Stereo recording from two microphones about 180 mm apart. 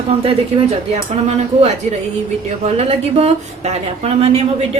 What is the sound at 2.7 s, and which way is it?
A woman's voice, 35° right (ahead or behind).